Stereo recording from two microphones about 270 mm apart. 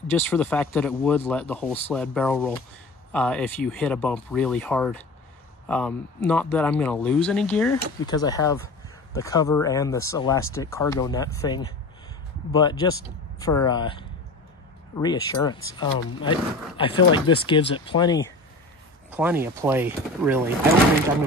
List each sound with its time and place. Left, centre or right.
0.1 s speech: centre
19.0 s speech: centre